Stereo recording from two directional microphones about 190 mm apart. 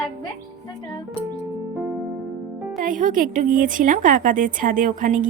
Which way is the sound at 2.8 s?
45° right (ahead or behind).